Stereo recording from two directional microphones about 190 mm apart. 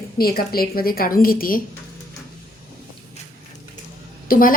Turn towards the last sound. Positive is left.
turn(degrees=45)  # may be behind; listen again after turning